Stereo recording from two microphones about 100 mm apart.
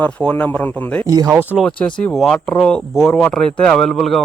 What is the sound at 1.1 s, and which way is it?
Speech, 35° right (ahead or behind).